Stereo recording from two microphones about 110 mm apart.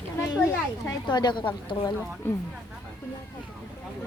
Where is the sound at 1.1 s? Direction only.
40° left (ahead or behind).